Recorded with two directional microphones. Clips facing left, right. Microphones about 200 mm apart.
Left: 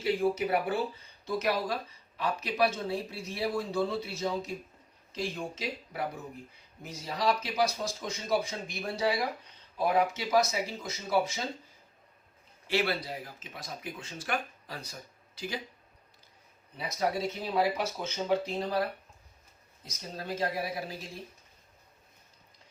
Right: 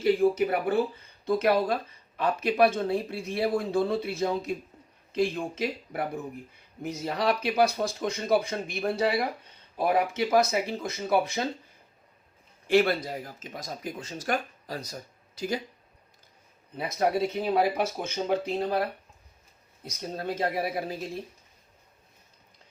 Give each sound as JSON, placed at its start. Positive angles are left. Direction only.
{"t": 0.0, "sound": "speech", "side_deg": -50}
{"t": 12.6, "sound": "speech", "side_deg": -45}
{"t": 16.7, "sound": "speech", "side_deg": -60}
{"t": 19.8, "sound": "speech", "side_deg": -55}